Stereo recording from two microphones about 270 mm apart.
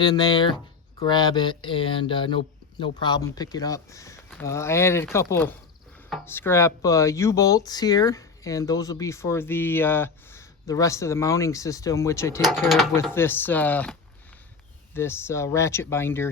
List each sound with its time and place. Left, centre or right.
0.0 s speech: centre
12.5 s speech: centre
14.9 s speech: centre